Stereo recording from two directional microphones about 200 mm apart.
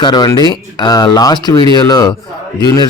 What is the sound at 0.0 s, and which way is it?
Speech, 20° left (ahead or behind).